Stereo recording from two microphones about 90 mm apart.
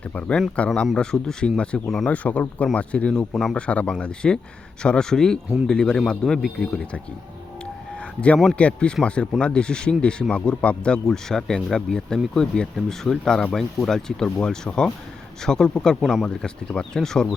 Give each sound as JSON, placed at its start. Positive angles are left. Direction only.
{"t": 0.1, "sound": "speech", "side_deg": 15}
{"t": 2.1, "sound": "speech", "side_deg": 15}
{"t": 7.9, "sound": "a sound", "side_deg": 15}
{"t": 8.5, "sound": "speech", "side_deg": 10}